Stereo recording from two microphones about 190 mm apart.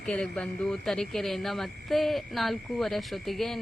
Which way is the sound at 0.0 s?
5° left (ahead or behind).